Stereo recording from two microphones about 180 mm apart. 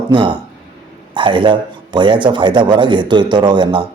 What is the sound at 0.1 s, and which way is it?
A man's voice, 25° right (ahead or behind).